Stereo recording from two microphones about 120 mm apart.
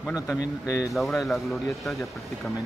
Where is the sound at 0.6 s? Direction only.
30° left (ahead or behind).